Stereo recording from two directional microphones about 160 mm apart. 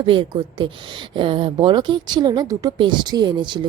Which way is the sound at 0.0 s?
30° right (ahead or behind).